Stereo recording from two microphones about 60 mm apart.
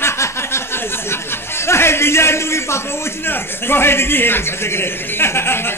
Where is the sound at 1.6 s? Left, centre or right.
Left.